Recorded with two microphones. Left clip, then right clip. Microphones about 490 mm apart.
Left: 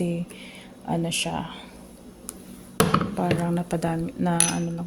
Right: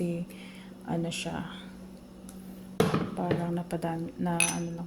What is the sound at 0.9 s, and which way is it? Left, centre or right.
Speech, right.